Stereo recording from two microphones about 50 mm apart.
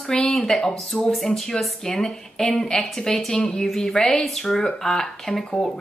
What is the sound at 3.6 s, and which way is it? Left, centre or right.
A woman's voice, centre.